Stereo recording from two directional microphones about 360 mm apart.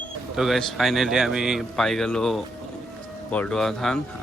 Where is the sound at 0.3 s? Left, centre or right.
Centre.